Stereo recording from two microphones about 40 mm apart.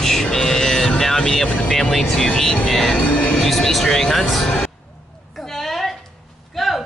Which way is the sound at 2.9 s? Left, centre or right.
Left.